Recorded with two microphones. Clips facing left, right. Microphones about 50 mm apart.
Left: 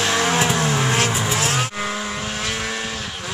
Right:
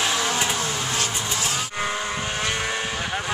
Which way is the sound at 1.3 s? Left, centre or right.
Left.